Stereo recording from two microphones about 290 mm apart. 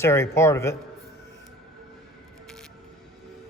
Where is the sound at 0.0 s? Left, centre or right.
Centre.